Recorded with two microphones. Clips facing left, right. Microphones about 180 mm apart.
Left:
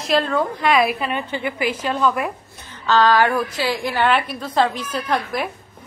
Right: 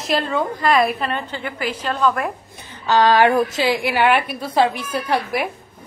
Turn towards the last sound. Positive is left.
turn(degrees=-10)  # may be behind; listen again after turning